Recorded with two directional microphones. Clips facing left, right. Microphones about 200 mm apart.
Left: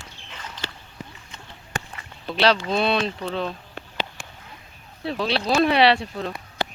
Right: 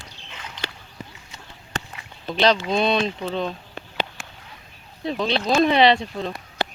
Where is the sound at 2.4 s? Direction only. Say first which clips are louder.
Right 1 dB; 5° left (ahead or behind).